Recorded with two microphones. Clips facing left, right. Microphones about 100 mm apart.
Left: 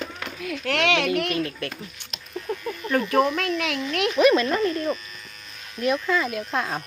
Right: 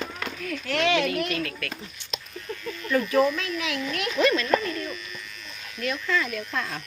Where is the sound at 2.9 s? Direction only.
55° left (ahead or behind).